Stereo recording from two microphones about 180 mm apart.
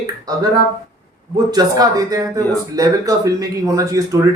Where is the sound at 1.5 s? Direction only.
20° right (ahead or behind).